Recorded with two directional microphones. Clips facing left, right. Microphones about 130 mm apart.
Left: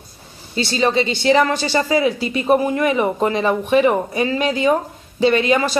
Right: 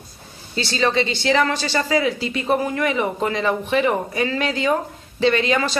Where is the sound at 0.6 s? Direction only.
20° left (ahead or behind).